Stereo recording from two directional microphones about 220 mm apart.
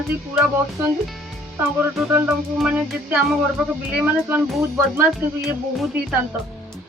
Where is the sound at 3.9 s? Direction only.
5° right (ahead or behind).